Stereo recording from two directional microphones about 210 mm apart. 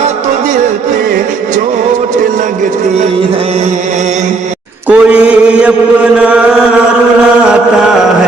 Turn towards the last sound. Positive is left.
turn(degrees=-5)  # may be behind; listen again after turning